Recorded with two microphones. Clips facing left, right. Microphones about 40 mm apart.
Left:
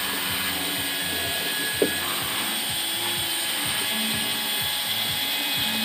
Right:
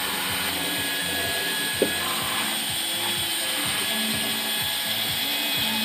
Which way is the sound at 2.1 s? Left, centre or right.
Centre.